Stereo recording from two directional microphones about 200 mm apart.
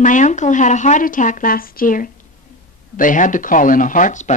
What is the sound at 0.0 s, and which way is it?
Speech, 40° left (ahead or behind).